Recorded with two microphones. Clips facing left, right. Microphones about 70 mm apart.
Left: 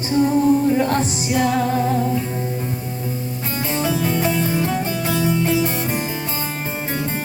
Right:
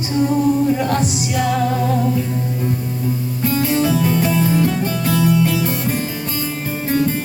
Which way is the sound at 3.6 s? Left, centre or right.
Left.